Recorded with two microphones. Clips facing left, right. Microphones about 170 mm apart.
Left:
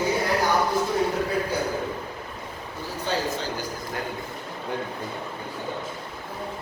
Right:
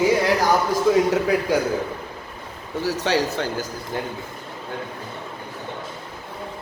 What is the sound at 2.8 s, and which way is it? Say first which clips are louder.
Speech: right 6 dB; 85° right.